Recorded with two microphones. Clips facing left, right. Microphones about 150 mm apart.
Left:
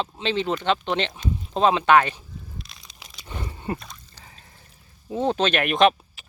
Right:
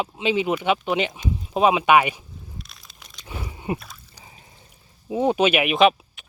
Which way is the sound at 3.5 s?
15° right (ahead or behind).